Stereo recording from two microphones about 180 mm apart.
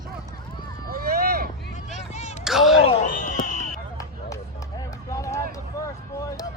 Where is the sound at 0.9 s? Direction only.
55° right (ahead or behind).